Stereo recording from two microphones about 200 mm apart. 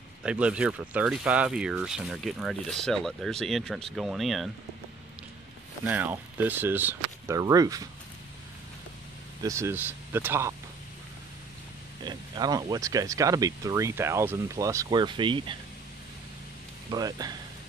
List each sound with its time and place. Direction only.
0.2 s speech: 5° right (ahead or behind)
5.9 s speech: 10° right (ahead or behind)
9.4 s speech: 15° right (ahead or behind)
12.0 s speech: 20° right (ahead or behind)
16.9 s speech: 20° right (ahead or behind)